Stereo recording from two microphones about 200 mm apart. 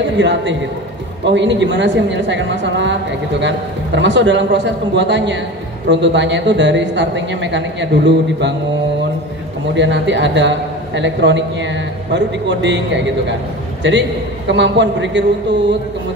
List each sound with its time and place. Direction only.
0.2 s speech: 60° right (ahead or behind)
9.8 s speech: 65° right (ahead or behind)
14.5 s speech: 60° right (ahead or behind)